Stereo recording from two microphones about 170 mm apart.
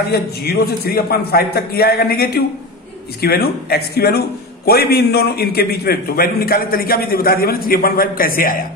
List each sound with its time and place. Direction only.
0.1 s a man's voice: 65° left (ahead or behind)